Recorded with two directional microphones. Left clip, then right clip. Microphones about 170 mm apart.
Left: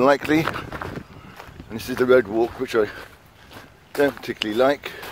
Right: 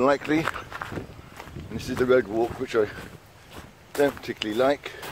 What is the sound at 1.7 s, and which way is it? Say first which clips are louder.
Speech: left 4 dB; 60° left (ahead or behind).